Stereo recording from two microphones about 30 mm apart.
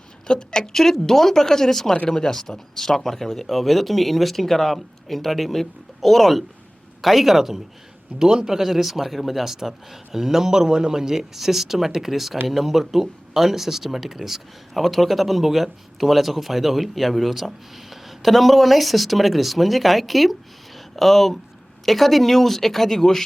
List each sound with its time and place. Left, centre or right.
0.3 s a woman's voice: left
0.7 s speech: centre
7.0 s speech: centre
8.2 s a man's voice: right
8.4 s speech: centre